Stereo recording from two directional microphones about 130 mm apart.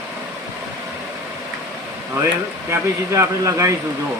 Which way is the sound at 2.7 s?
25° right (ahead or behind).